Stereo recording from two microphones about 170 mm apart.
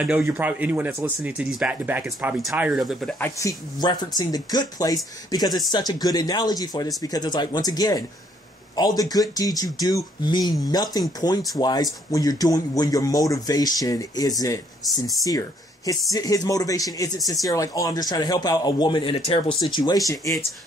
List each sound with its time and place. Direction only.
0.0 s speech: 5° right (ahead or behind)
3.2 s speech: 15° left (ahead or behind)